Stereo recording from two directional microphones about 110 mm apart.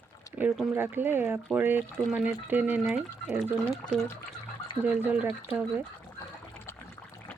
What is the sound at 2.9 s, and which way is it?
Speech, 5° right (ahead or behind).